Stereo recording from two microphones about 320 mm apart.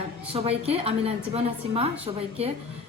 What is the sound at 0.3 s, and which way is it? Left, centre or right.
A woman's voice, centre.